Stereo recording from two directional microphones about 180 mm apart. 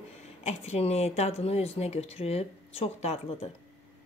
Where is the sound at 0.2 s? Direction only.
35° left (ahead or behind).